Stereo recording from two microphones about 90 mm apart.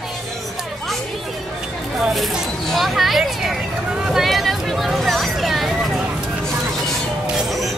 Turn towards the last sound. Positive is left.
turn(degrees=0)  # may be behind; listen again after turning